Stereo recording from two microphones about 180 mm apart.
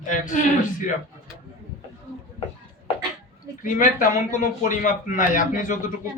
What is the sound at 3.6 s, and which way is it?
Speech, 45° left (ahead or behind).